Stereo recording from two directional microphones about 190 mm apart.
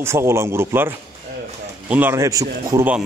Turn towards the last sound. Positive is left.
turn(degrees=-10)  # may be behind; listen again after turning